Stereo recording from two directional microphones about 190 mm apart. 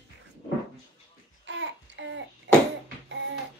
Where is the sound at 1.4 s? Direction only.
70° right (ahead or behind).